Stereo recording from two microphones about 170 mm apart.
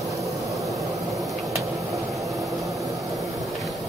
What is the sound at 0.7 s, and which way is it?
Vehicle, 20° right (ahead or behind).